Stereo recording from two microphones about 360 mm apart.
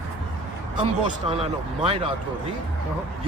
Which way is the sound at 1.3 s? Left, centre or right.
Centre.